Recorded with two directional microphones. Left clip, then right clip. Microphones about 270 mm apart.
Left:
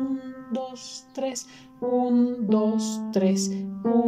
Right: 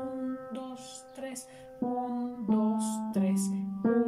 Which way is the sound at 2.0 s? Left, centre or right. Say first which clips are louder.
Left 10 dB; left.